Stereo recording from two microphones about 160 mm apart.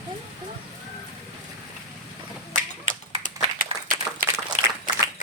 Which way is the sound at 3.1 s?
55° right (ahead or behind).